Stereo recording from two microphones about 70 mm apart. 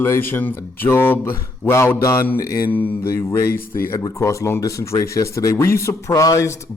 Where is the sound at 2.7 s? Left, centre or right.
Left.